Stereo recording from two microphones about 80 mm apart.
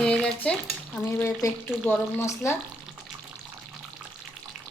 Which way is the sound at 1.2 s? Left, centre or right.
Left.